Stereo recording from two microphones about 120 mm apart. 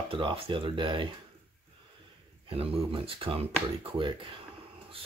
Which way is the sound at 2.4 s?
50° right (ahead or behind).